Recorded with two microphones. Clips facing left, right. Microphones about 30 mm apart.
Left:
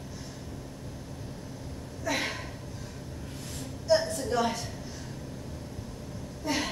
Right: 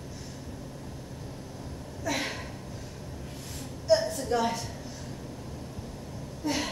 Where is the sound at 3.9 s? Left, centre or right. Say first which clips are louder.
Right 1 dB; centre.